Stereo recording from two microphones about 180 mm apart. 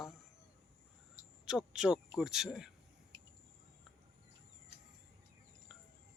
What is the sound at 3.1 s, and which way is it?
Cricket, 25° right (ahead or behind).